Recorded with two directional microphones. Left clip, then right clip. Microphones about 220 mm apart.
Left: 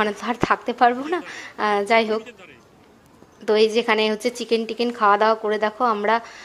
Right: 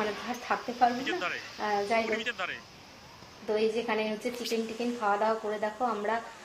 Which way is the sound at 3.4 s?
45° left (ahead or behind).